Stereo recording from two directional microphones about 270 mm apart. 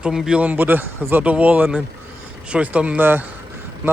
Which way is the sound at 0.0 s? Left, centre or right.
Centre.